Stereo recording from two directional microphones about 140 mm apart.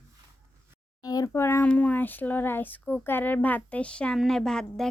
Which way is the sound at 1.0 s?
25° left (ahead or behind).